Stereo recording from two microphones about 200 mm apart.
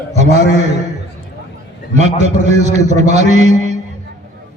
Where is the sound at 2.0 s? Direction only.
35° right (ahead or behind).